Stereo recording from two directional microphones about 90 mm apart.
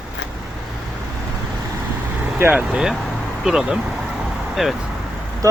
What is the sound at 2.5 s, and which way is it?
Speech, 10° right (ahead or behind).